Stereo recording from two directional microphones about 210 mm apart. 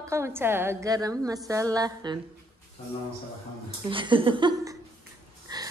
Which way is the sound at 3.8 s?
25° right (ahead or behind).